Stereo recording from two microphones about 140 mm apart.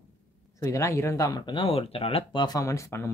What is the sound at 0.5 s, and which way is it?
Speech, 20° left (ahead or behind).